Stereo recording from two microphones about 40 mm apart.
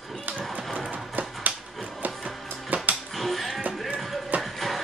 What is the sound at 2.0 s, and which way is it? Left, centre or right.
Music, right.